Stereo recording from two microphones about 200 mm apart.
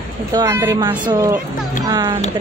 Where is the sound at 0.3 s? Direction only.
15° right (ahead or behind).